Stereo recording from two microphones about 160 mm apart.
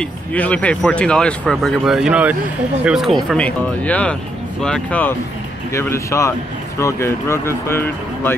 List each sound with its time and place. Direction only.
0.0 s speech: 10° left (ahead or behind)
3.3 s speech: 10° left (ahead or behind)